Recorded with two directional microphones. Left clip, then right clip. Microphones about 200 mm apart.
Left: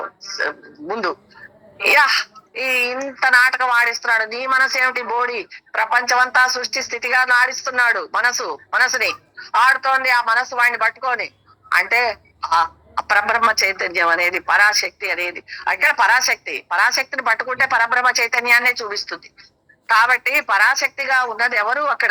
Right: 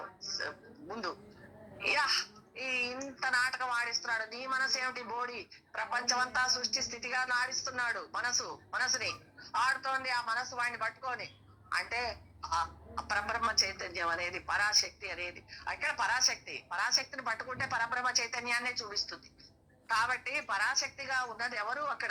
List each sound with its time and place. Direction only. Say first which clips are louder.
0.0 s speech: left 16 dB; 45° left (ahead or behind)